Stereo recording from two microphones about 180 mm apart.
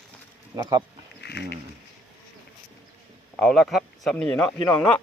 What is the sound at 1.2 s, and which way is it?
Speech, 65° left (ahead or behind).